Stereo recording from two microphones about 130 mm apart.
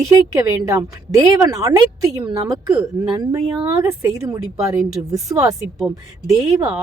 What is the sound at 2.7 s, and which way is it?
A woman's voice, 30° right (ahead or behind).